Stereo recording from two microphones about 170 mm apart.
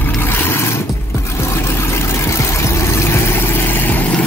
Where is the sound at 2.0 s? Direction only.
15° left (ahead or behind).